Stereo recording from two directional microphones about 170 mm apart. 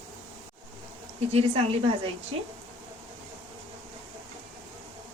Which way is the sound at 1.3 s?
35° right (ahead or behind).